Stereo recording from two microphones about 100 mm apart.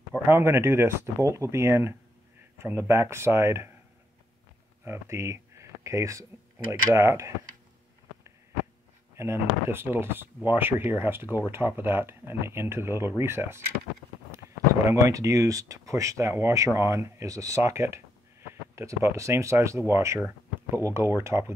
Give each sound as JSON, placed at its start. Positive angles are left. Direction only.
{"t": 0.2, "sound": "speech", "side_deg": -25}
{"t": 4.8, "sound": "speech", "side_deg": -30}
{"t": 9.1, "sound": "speech", "side_deg": -25}
{"t": 14.9, "sound": "speech", "side_deg": -30}